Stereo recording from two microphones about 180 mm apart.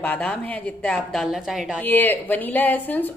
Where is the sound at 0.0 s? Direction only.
10° left (ahead or behind).